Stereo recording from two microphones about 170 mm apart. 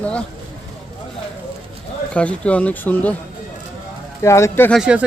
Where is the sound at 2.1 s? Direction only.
5° left (ahead or behind).